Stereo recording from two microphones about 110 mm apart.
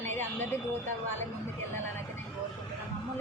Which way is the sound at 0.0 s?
20° left (ahead or behind).